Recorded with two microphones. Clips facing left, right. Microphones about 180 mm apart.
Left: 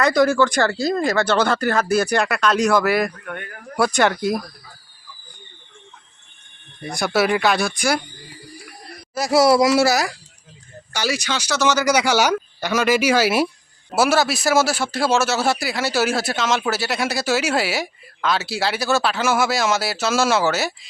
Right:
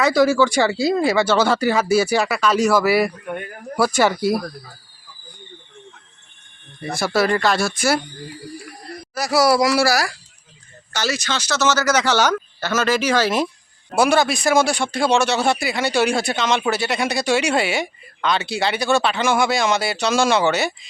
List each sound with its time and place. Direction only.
0.0 s a man's voice: 5° right (ahead or behind)
6.9 s a man's voice: centre (ahead or behind)
9.1 s a man's voice: 25° left (ahead or behind); by 20.7 s centre (ahead or behind)